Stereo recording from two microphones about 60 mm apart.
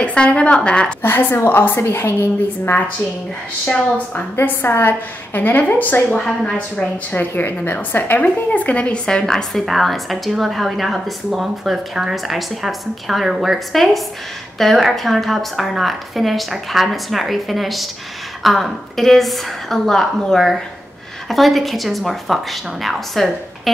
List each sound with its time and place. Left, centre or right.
0.0 s a woman's voice: centre
1.0 s a woman's voice: left
3.6 s a woman's voice: left
4.4 s a woman's voice: left
6.1 s a woman's voice: centre
6.8 s a woman's voice: left; by 23.7 s centre